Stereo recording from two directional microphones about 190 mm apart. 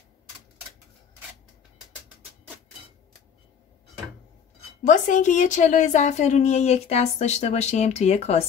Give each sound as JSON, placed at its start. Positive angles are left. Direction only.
{"t": 4.8, "sound": "a woman's voice", "side_deg": 40}